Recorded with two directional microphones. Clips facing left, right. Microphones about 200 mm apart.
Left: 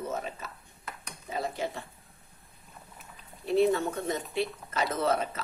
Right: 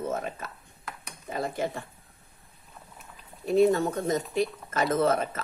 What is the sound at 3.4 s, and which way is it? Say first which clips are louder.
Speech: right 3 dB; 45° right (ahead or behind).